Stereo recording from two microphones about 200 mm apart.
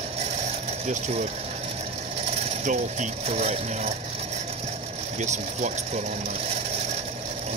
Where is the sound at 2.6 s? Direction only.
35° right (ahead or behind).